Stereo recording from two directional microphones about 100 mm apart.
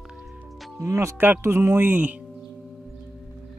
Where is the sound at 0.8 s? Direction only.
35° right (ahead or behind).